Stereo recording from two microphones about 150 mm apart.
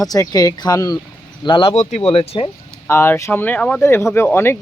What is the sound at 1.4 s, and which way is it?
Speech, 35° left (ahead or behind).